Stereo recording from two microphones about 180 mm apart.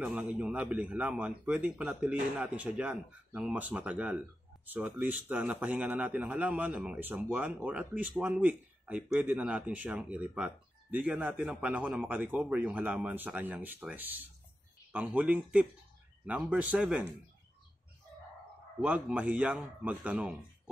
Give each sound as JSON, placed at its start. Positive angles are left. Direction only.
{"t": 0.0, "sound": "a man's voice", "side_deg": -5}
{"t": 18.8, "sound": "a man's voice", "side_deg": -5}